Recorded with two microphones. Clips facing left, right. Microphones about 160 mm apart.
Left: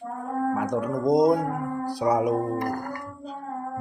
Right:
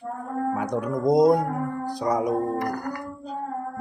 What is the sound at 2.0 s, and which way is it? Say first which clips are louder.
Music: left 2 dB; 10° left (ahead or behind).